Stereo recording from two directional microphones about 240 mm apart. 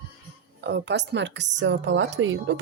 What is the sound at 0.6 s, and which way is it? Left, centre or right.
A woman's voice, right.